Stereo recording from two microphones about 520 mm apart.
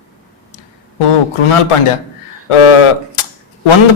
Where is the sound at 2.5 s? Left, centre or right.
Left.